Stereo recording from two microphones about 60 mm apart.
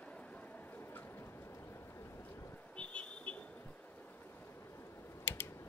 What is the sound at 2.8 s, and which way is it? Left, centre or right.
Vehicle, left.